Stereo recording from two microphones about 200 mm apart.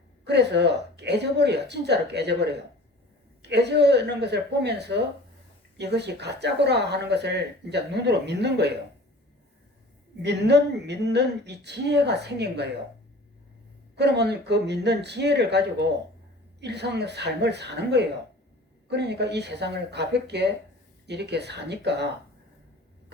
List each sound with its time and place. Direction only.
0.3 s speech: 60° right (ahead or behind)
10.2 s speech: 55° right (ahead or behind)
13.9 s speech: 55° right (ahead or behind)